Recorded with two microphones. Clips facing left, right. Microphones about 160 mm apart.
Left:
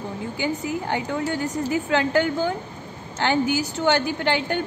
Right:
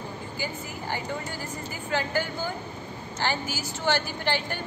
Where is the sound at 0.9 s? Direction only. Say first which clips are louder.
Left 6 dB; 75° left (ahead or behind).